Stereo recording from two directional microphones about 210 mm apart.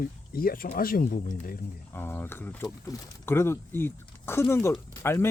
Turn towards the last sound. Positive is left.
turn(degrees=10)  # may be behind; listen again after turning